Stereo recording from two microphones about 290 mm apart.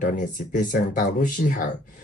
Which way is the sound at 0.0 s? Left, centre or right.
Left.